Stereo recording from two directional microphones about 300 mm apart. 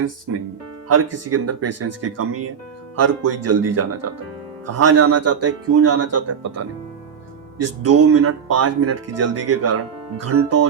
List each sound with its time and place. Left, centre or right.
0.0 s speech: right